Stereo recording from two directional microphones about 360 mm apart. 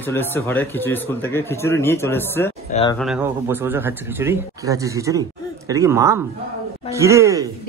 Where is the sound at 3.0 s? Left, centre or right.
Centre.